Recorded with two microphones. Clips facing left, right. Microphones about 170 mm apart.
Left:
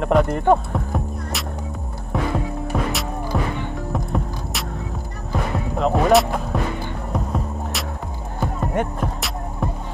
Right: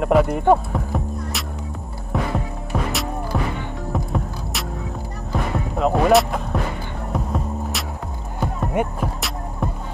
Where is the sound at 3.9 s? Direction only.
Centre (ahead or behind).